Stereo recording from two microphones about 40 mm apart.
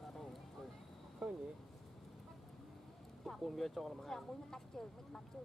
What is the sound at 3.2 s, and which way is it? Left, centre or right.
Speech, centre.